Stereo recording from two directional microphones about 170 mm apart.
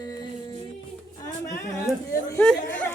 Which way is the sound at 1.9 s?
Centre (ahead or behind).